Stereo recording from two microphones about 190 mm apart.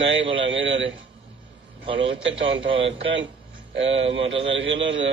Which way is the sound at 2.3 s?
30° right (ahead or behind).